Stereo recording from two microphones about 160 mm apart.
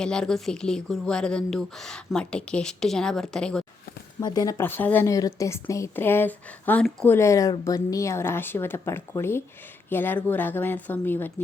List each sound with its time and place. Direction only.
0.0 s speech: 5° left (ahead or behind)
4.2 s a woman's voice: 25° left (ahead or behind)